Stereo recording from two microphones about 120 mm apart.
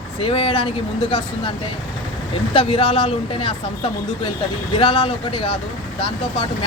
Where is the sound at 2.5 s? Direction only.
45° left (ahead or behind).